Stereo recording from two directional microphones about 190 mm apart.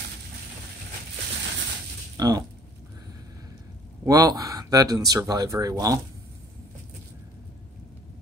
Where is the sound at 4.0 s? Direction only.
20° right (ahead or behind).